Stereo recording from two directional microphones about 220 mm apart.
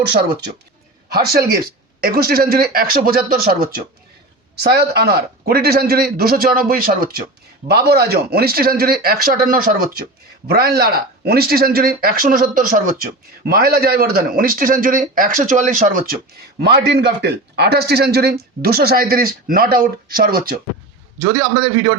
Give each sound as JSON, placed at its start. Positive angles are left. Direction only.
{"t": 0.0, "sound": "a man's voice", "side_deg": -45}
{"t": 21.3, "sound": "a man's voice", "side_deg": -15}